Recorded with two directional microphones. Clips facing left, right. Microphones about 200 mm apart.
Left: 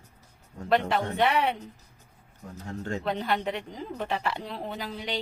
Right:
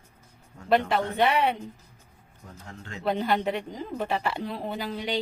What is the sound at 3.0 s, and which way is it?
A woman's voice, centre (ahead or behind).